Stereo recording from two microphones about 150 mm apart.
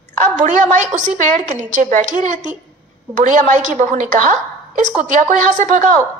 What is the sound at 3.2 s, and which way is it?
A woman's voice, 55° right (ahead or behind).